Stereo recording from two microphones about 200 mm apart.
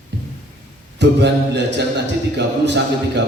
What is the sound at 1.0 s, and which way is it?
A man's voice, 60° right (ahead or behind).